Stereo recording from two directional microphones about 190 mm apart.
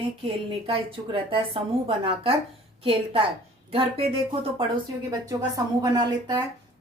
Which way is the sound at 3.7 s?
30° right (ahead or behind).